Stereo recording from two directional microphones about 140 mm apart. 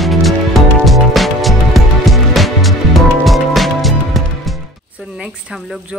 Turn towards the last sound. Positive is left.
turn(degrees=0)  # may be behind; listen again after turning